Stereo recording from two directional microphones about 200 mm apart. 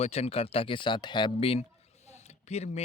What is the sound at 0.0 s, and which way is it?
Speech, 30° left (ahead or behind).